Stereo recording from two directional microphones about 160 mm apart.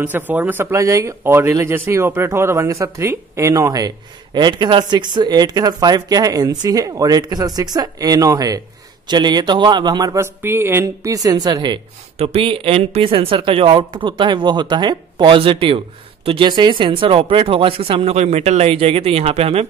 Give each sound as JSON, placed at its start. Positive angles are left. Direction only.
{"t": 0.0, "sound": "speech", "side_deg": -10}
{"t": 12.2, "sound": "speech", "side_deg": -40}